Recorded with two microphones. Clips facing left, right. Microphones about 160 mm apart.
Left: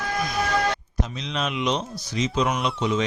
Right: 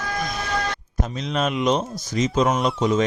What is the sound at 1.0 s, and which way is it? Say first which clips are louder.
Speech: right 7 dB; 45° right (ahead or behind).